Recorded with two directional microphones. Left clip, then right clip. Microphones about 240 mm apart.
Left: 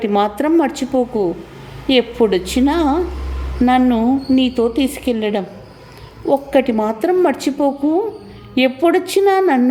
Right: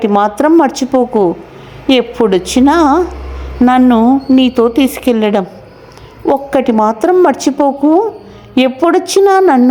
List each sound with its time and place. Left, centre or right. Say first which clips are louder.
0.0 s a woman's voice: right 6 dB; centre